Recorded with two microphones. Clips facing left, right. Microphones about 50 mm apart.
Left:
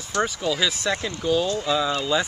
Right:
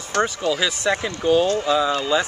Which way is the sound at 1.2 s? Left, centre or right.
Right.